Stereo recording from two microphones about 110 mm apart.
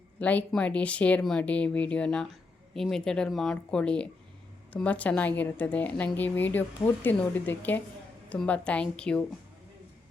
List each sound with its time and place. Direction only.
0.2 s speech: 15° left (ahead or behind)